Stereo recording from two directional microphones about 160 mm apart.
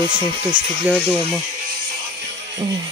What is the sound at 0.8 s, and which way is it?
Speech, 5° right (ahead or behind).